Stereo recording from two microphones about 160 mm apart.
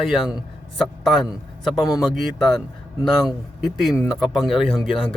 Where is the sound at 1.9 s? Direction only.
Centre (ahead or behind).